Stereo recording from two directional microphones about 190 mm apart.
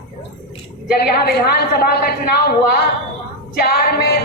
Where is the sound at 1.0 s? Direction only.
55° left (ahead or behind).